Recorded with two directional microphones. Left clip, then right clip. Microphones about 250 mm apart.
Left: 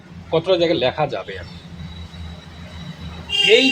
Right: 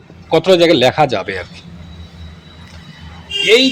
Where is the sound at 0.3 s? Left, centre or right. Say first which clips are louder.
Right 7 dB; right.